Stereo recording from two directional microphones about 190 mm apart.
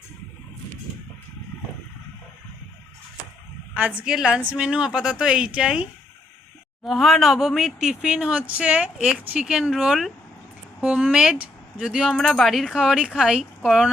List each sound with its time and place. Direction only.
3.8 s speech: 5° right (ahead or behind)